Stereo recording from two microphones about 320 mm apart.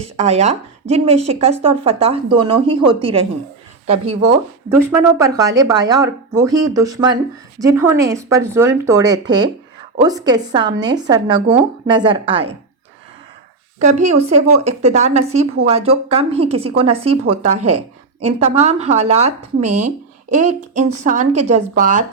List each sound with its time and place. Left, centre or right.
0.0 s a woman's voice: centre
13.7 s a woman's voice: right